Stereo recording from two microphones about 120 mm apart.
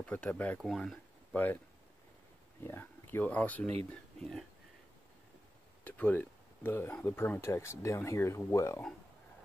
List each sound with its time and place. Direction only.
0.0 s speech: 10° left (ahead or behind)
0.7 s speech: centre (ahead or behind)
1.3 s speech: 15° left (ahead or behind)
2.6 s speech: 20° left (ahead or behind)
5.9 s speech: 15° left (ahead or behind)